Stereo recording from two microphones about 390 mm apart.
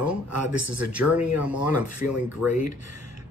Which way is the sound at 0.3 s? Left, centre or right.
Right.